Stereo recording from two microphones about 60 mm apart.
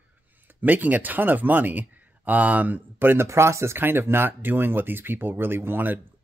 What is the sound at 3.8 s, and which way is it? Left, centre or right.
Speech, right.